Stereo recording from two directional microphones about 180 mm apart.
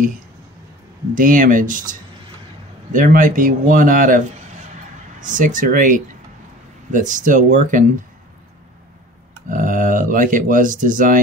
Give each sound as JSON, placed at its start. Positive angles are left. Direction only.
{"t": 1.1, "sound": "a man's voice", "side_deg": -45}
{"t": 9.5, "sound": "speech", "side_deg": -45}